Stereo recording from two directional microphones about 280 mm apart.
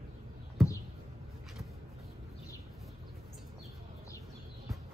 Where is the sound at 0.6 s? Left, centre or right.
Centre.